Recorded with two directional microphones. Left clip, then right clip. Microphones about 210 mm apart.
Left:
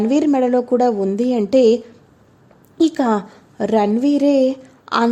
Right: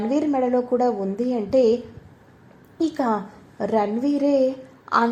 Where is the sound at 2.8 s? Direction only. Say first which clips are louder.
Left 6 dB; 35° left (ahead or behind).